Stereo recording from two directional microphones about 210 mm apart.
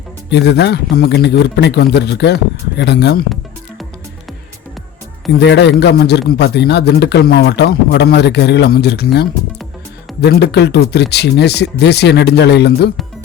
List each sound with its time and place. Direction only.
0.3 s a man's voice: 55° left (ahead or behind)
5.3 s a man's voice: 55° left (ahead or behind)
10.2 s a man's voice: 55° left (ahead or behind)